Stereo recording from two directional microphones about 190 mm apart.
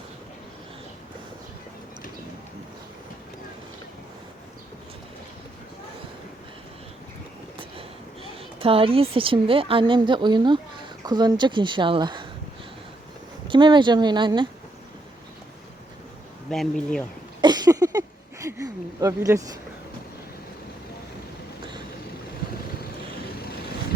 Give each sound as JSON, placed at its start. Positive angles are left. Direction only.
{"t": 7.8, "sound": "a woman's voice", "side_deg": -30}
{"t": 13.5, "sound": "speech", "side_deg": -25}
{"t": 16.5, "sound": "speech", "side_deg": 5}
{"t": 17.4, "sound": "a sound", "side_deg": -20}